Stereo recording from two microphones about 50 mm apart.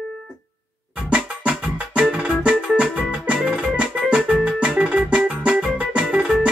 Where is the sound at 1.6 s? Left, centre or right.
Right.